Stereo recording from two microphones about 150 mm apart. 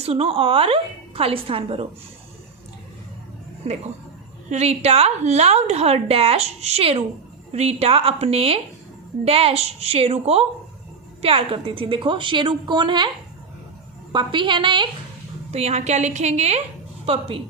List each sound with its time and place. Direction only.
0.0 s a woman's voice: 40° right (ahead or behind)
4.4 s a woman's voice: 45° right (ahead or behind); by 13.1 s 30° right (ahead or behind)
14.1 s a woman's voice: 30° right (ahead or behind)
15.5 s a woman's voice: 45° right (ahead or behind)